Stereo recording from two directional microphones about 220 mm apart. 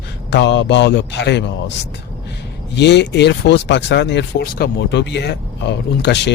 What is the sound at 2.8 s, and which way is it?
Speech, 50° left (ahead or behind).